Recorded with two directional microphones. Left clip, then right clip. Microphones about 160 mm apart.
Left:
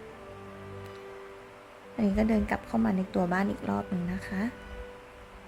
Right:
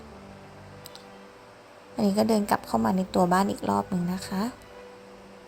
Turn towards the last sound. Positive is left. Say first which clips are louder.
# right 3 dB
turn(degrees=-15)  # may be behind; listen again after turning